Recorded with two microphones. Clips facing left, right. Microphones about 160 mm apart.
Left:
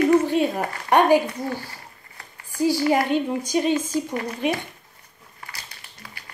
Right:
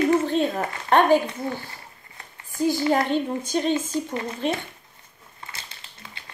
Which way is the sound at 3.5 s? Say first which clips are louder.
Left 2 dB; 10° left (ahead or behind).